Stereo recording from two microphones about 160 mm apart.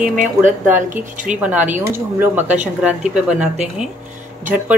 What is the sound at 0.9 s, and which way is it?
Speech, 55° right (ahead or behind).